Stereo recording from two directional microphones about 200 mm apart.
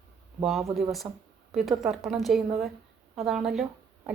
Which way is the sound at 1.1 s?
20° right (ahead or behind).